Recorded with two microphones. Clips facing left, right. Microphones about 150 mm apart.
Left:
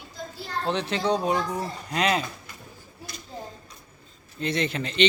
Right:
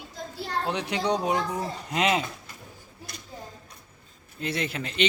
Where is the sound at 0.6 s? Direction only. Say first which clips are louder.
Left 3 dB; 10° right (ahead or behind).